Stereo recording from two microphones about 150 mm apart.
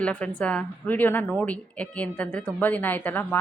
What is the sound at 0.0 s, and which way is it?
A woman's voice, 10° left (ahead or behind).